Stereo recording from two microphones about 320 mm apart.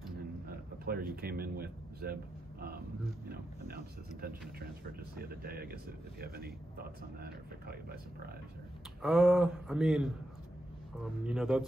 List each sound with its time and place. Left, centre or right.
0.5 s speech: right
3.3 s speech: right
9.0 s speech: centre
11.2 s speech: centre